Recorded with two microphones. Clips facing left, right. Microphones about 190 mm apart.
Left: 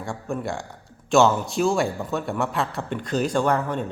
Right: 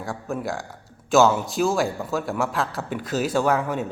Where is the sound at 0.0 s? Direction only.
Centre (ahead or behind).